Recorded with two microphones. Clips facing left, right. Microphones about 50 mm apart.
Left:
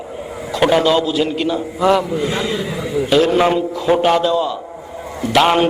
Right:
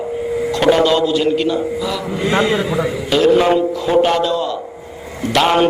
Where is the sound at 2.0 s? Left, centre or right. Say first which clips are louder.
Right 3 dB; right.